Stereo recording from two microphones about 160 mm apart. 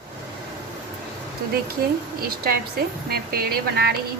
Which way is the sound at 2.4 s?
75° right (ahead or behind).